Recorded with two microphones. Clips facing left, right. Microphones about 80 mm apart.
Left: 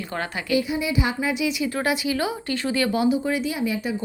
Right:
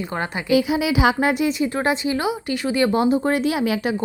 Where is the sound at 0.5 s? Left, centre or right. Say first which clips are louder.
Right 5 dB; right.